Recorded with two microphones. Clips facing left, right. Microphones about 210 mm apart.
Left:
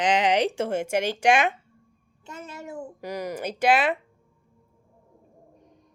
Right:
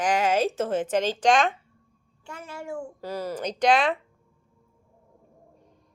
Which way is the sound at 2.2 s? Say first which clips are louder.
Even; 20° left (ahead or behind).